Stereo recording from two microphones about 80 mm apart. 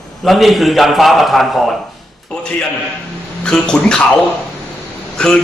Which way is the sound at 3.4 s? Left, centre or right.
Centre.